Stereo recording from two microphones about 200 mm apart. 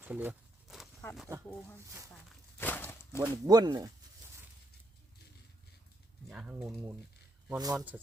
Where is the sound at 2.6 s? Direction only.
10° left (ahead or behind).